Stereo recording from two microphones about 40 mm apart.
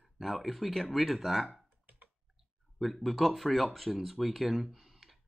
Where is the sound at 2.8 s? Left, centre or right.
Centre.